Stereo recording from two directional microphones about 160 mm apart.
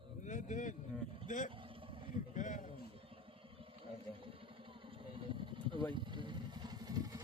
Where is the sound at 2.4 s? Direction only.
55° left (ahead or behind).